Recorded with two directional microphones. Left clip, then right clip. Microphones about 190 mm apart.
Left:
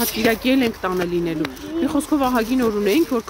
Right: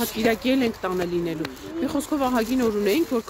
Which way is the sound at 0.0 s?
Centre (ahead or behind).